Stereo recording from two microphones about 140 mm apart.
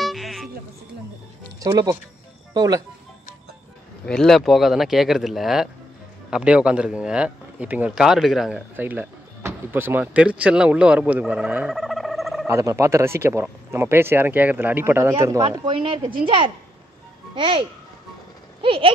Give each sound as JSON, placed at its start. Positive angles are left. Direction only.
{"t": 0.0, "sound": "music", "side_deg": 0}
{"t": 1.6, "sound": "speech", "side_deg": -25}
{"t": 4.0, "sound": "speech", "side_deg": 5}
{"t": 12.4, "sound": "speech", "side_deg": -20}
{"t": 15.6, "sound": "speech", "side_deg": -35}